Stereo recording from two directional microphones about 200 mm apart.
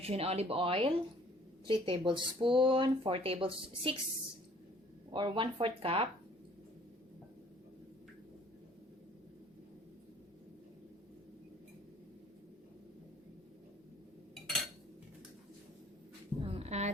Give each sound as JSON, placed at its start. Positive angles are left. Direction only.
{"t": 0.0, "sound": "speech", "side_deg": -30}
{"t": 5.1, "sound": "speech", "side_deg": -25}
{"t": 14.4, "sound": "cutlery", "side_deg": 0}
{"t": 16.5, "sound": "a sound", "side_deg": -30}